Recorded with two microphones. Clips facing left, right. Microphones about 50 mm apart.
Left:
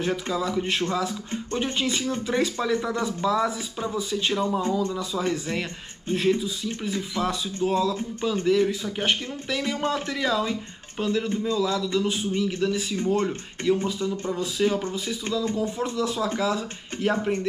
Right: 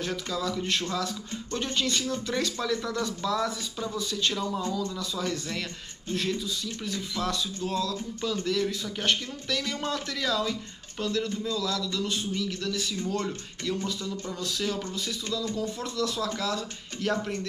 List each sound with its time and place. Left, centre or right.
0.0 s speech: left